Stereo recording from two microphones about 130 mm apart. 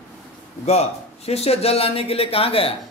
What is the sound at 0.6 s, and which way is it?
Speech, 55° left (ahead or behind).